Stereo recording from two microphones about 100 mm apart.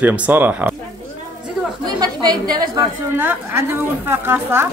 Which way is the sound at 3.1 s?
20° right (ahead or behind).